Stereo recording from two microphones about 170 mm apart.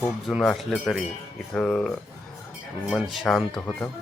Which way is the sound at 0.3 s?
Centre (ahead or behind).